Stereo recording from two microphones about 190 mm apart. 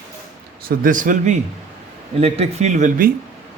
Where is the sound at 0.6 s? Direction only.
45° right (ahead or behind).